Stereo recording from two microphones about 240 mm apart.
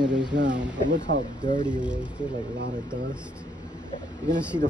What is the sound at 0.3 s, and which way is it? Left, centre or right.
Speech, right.